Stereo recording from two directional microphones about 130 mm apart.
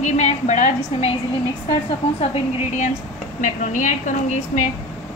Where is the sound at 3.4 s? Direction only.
75° left (ahead or behind).